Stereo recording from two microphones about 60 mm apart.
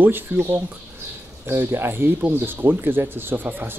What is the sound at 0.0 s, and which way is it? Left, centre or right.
Speech, right.